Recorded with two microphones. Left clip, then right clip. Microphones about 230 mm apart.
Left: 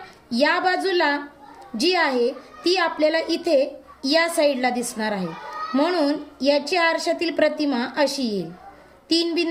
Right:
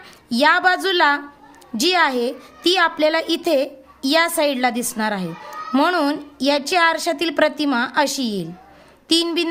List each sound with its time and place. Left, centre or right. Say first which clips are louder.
0.3 s a woman's voice: right 5 dB; right